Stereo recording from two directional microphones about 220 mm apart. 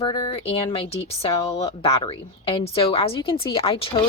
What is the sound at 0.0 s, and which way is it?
A woman's voice, 25° left (ahead or behind).